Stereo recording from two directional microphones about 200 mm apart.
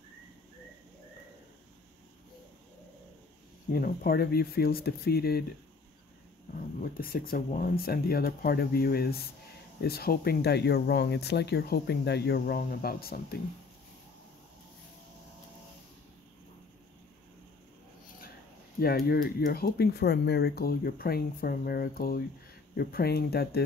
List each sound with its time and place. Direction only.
3.7 s speech: 45° left (ahead or behind)
6.8 s speech: 50° left (ahead or behind)
18.8 s speech: 50° left (ahead or behind)